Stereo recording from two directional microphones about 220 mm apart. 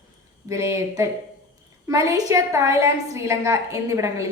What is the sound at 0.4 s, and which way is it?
A woman's voice, 15° right (ahead or behind).